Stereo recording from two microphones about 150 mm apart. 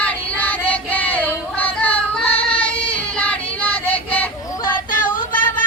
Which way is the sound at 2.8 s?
10° left (ahead or behind).